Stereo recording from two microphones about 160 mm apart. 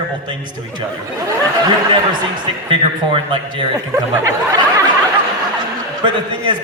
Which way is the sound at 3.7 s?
20° right (ahead or behind).